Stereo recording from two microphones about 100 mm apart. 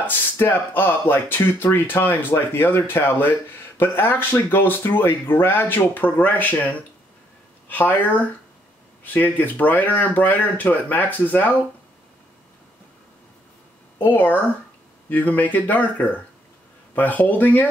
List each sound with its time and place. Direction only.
0.0 s speech: 20° left (ahead or behind)
13.9 s speech: 20° left (ahead or behind)